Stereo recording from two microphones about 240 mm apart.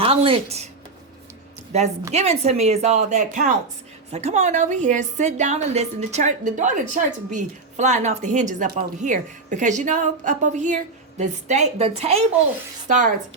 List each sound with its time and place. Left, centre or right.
0.0 s a woman's voice: right
1.7 s a woman's voice: right